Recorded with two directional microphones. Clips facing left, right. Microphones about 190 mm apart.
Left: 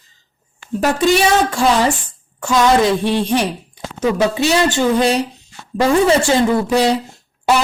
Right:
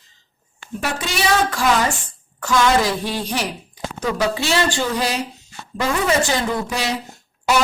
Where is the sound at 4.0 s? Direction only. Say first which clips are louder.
Left 6 dB; 25° left (ahead or behind).